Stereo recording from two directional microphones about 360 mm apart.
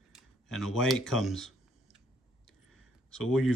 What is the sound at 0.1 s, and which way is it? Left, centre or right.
Speech, centre.